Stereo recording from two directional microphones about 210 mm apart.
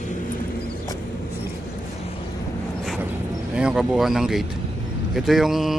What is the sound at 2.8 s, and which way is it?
Vehicle, centre (ahead or behind).